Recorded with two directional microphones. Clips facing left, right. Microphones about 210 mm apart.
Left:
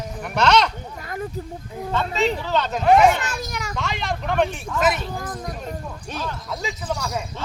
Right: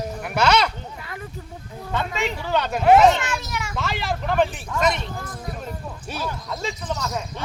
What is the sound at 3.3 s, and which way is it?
Children playing, 40° left (ahead or behind).